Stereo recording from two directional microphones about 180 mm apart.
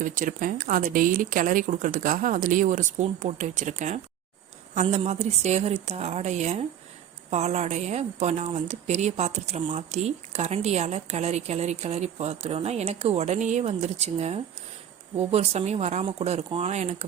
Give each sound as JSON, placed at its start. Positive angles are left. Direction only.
{"t": 0.0, "sound": "speech", "side_deg": -45}